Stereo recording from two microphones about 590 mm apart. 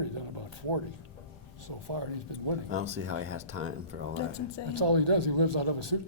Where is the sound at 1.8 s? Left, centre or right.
Right.